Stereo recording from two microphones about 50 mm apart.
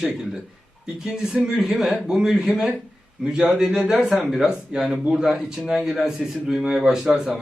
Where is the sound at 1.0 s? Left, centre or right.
Centre.